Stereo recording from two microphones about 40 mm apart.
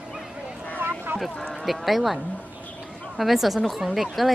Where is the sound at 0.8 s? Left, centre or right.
Right.